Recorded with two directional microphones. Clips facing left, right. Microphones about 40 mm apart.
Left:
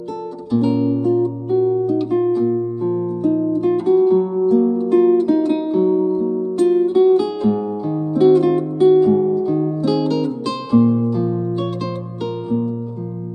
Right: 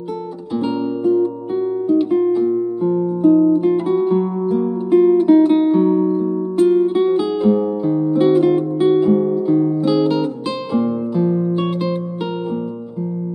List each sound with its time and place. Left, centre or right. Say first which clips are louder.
0.6 s music: left 3 dB; right
4.9 s guitar: right 4 dB; centre
6.7 s music: left 2 dB; right